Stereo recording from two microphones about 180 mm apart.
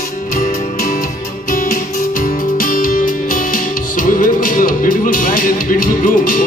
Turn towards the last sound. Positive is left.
turn(degrees=50)  # may be behind; listen again after turning